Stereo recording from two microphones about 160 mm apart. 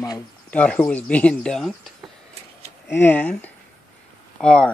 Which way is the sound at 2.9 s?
10° left (ahead or behind).